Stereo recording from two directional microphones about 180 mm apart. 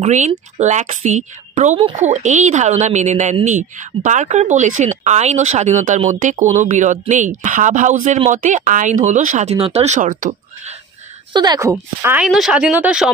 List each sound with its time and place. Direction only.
0.0 s a woman's voice: 40° right (ahead or behind)
11.3 s speech: 20° right (ahead or behind)
11.7 s speech: 10° right (ahead or behind)